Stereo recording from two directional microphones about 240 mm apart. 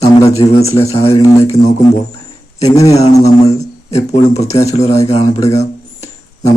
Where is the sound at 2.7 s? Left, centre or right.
Centre.